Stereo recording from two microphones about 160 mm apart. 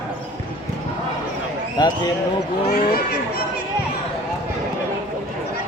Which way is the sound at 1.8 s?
25° left (ahead or behind).